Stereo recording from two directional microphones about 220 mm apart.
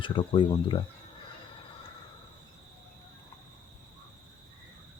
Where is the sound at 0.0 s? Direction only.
20° left (ahead or behind).